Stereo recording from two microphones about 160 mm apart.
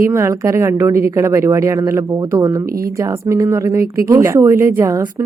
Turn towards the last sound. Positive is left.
turn(degrees=-20)  # may be behind; listen again after turning